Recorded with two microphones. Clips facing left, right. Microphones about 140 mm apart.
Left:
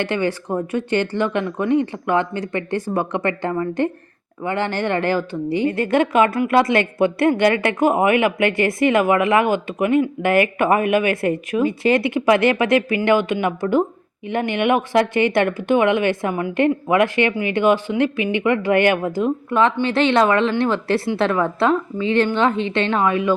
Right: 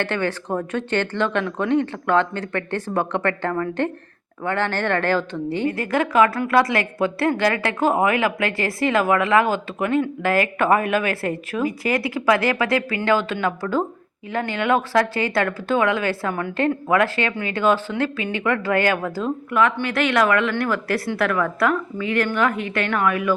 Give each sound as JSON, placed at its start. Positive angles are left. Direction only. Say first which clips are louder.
{"t": 0.0, "sound": "speech", "louder": "left 2 dB", "side_deg": 15}
{"t": 5.6, "sound": "speech", "louder": "left 4 dB", "side_deg": 25}